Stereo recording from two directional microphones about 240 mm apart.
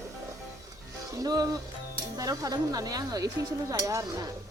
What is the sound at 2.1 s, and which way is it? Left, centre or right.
Speech, centre.